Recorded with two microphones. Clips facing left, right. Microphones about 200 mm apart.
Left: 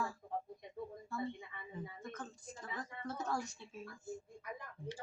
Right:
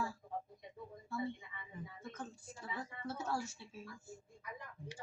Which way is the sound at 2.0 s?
10° right (ahead or behind).